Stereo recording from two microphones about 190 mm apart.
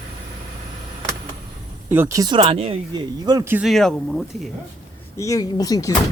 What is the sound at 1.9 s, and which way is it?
Speech, 15° right (ahead or behind).